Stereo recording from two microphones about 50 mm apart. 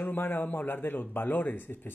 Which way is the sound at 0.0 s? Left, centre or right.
Left.